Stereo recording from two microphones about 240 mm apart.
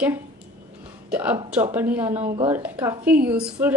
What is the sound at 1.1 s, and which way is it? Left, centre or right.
A woman's voice, centre.